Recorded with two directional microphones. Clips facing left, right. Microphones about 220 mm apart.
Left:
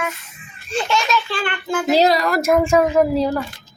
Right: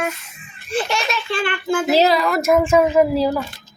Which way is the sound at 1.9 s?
Centre (ahead or behind).